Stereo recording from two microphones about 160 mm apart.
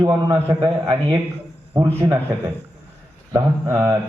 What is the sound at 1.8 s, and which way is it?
Mantra, 25° right (ahead or behind).